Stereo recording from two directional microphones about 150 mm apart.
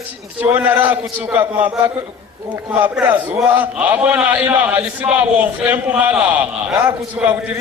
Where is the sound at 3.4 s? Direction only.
10° right (ahead or behind).